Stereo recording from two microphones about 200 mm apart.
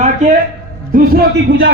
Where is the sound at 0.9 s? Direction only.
50° right (ahead or behind).